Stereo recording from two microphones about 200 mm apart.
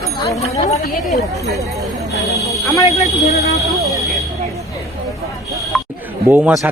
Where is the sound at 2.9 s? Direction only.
30° left (ahead or behind).